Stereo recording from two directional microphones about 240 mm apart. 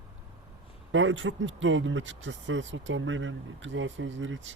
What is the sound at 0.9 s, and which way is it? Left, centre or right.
Speech, right.